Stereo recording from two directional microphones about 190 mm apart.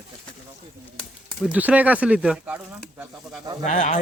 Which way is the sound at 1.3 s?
5° right (ahead or behind).